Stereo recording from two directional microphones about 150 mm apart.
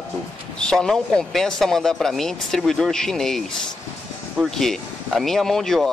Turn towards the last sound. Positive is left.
turn(degrees=0)  # may be behind; listen again after turning